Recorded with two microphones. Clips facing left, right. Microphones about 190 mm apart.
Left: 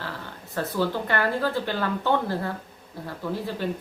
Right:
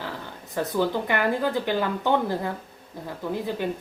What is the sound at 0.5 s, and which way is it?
Speech, 15° right (ahead or behind).